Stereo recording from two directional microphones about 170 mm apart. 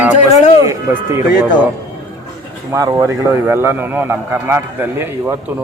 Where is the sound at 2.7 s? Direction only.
20° right (ahead or behind).